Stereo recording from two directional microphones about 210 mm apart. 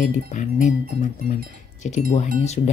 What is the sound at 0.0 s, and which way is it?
Speech, 35° left (ahead or behind).